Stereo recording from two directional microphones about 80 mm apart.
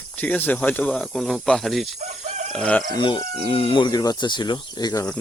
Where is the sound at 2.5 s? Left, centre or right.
Centre.